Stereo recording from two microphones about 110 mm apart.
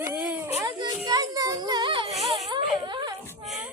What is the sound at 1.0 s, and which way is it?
Child singing, 35° right (ahead or behind).